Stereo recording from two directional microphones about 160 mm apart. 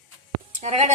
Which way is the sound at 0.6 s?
45° right (ahead or behind).